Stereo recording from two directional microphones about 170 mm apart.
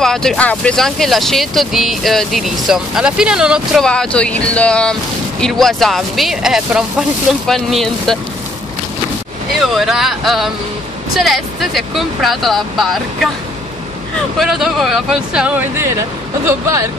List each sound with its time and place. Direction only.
0.0 s speech: 5° left (ahead or behind)
9.8 s speech: centre (ahead or behind)
14.4 s speech: centre (ahead or behind); by 16.8 s 15° right (ahead or behind)